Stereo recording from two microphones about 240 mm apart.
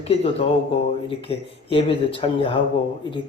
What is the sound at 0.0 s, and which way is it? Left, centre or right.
A man's voice, left.